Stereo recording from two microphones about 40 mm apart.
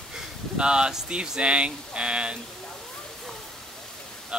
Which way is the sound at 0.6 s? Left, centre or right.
Right.